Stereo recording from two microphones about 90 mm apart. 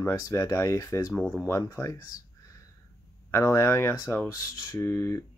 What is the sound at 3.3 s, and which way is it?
Speech, 30° left (ahead or behind).